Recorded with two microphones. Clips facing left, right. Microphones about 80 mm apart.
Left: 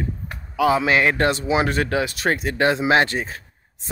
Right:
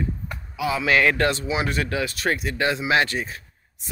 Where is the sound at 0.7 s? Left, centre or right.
Left.